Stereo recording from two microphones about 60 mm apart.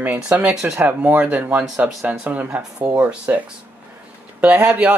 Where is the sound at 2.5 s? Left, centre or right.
Centre.